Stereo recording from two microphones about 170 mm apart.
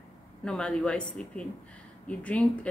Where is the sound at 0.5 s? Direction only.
5° left (ahead or behind).